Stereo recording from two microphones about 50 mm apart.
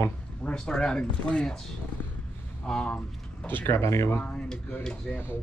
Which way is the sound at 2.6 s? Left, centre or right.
Centre.